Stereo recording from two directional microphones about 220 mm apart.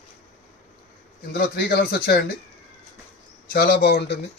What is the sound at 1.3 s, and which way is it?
Speech, 45° left (ahead or behind).